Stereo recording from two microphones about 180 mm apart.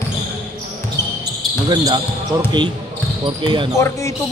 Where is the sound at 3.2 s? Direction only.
25° right (ahead or behind).